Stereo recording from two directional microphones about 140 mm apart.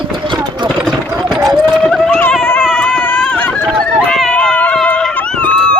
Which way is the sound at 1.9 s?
Centre (ahead or behind).